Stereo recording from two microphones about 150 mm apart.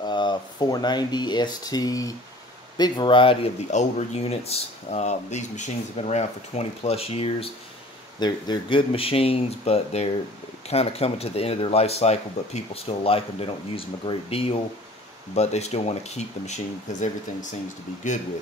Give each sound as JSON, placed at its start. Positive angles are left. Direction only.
{"t": 0.0, "sound": "speech", "side_deg": 30}
{"t": 3.7, "sound": "speech", "side_deg": 45}